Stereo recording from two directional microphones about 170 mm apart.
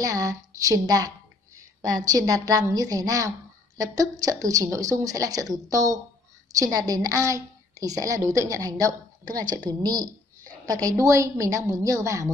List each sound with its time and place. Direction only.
0.0 s a woman's voice: 20° right (ahead or behind)